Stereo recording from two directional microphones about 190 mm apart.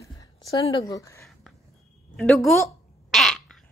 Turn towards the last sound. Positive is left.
turn(degrees=0)  # may be behind; listen again after turning